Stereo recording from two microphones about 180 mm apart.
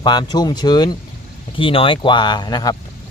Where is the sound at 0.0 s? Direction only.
25° left (ahead or behind).